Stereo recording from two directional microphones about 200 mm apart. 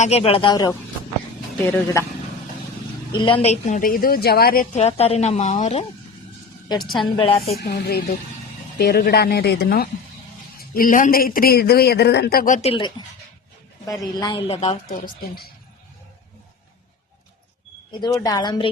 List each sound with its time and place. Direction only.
0.0 s a man's voice: 30° left (ahead or behind); by 2.0 s 15° left (ahead or behind)
3.1 s a woman's voice: 25° left (ahead or behind)
6.8 s a woman's voice: centre (ahead or behind)
7.2 s speech: 30° left (ahead or behind)
7.5 s speech: 50° left (ahead or behind)
12.6 s speech: 25° left (ahead or behind)
14.0 s speech: 20° left (ahead or behind)
17.9 s speech: 20° left (ahead or behind)